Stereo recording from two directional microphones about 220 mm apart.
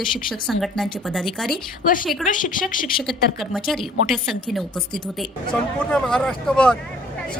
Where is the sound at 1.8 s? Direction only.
40° left (ahead or behind).